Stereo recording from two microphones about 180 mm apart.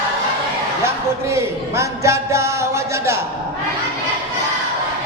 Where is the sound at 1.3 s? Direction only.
15° right (ahead or behind).